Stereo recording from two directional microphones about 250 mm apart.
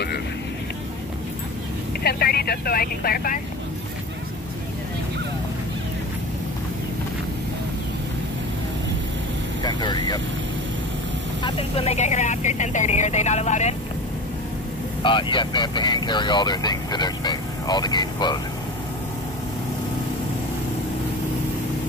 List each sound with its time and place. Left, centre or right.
2.0 s speech: left
9.6 s speech: centre
11.4 s speech: left
15.0 s speech: centre